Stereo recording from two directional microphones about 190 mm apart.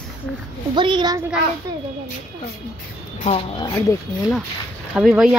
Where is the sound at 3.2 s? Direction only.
35° left (ahead or behind).